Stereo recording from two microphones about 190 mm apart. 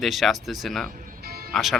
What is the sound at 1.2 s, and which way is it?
Music, 55° right (ahead or behind).